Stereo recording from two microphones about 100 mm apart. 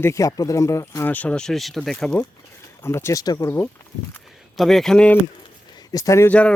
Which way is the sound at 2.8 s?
25° left (ahead or behind).